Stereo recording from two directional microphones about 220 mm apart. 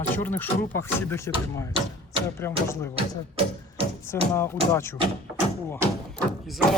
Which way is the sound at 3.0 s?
25° right (ahead or behind).